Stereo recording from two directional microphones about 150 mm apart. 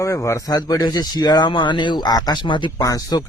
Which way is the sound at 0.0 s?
20° left (ahead or behind).